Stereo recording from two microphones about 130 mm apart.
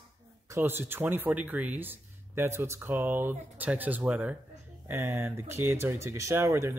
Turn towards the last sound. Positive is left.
turn(degrees=-20)  # may be behind; listen again after turning